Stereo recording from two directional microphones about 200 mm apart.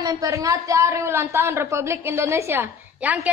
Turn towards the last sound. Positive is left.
turn(degrees=-5)  # may be behind; listen again after turning